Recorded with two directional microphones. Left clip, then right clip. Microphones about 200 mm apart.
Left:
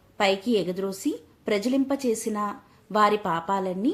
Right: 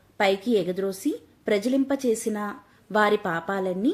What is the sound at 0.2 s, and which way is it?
A woman's voice, 15° right (ahead or behind).